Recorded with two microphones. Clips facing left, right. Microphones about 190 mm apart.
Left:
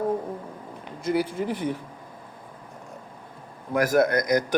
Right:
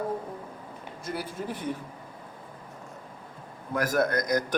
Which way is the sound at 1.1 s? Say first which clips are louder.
Left 9 dB; 80° left.